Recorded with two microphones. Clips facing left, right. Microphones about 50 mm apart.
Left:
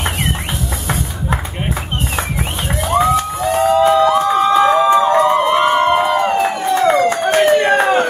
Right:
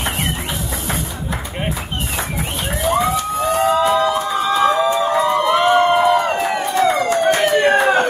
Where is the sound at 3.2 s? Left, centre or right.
Left.